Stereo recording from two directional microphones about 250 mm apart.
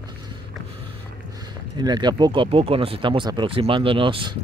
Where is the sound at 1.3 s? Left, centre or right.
Centre.